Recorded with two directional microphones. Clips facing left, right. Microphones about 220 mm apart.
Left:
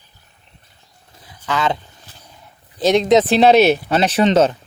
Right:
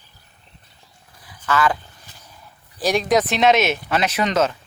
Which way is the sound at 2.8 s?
20° left (ahead or behind).